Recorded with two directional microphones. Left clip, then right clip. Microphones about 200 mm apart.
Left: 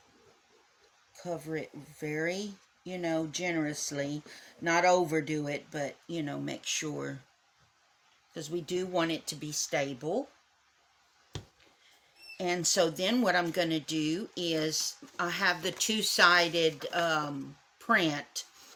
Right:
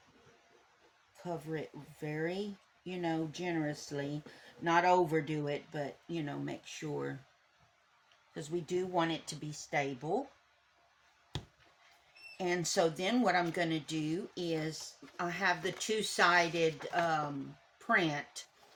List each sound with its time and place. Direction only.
1.1 s speech: 40° left (ahead or behind)
8.4 s speech: 50° left (ahead or behind)
12.4 s speech: 45° left (ahead or behind)